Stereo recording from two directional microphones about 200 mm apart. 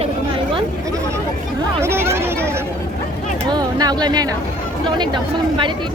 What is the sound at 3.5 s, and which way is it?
Speech, 20° right (ahead or behind).